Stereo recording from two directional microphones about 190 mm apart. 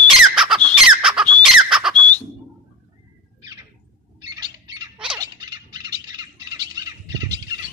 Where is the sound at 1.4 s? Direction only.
Centre (ahead or behind).